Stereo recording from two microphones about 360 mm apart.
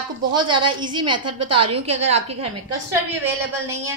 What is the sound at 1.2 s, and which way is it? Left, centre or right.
Speech, right.